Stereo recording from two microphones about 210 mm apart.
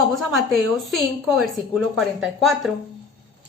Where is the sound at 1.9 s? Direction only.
Centre (ahead or behind).